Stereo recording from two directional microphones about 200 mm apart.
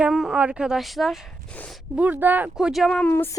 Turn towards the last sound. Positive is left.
turn(degrees=10)  # may be behind; listen again after turning